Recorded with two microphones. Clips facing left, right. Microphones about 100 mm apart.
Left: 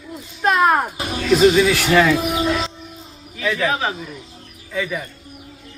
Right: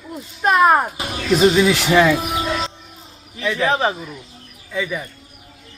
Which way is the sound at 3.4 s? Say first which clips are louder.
Right 2 dB; 30° right (ahead or behind).